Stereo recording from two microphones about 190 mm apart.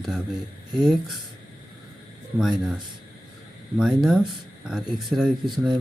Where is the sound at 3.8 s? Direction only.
5° right (ahead or behind).